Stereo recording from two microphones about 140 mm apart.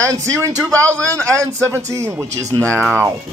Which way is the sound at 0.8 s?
10° left (ahead or behind).